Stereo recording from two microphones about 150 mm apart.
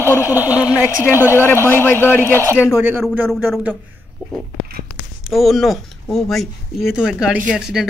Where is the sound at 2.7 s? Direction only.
10° right (ahead or behind).